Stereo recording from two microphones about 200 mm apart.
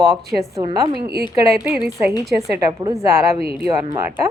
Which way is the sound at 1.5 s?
10° right (ahead or behind).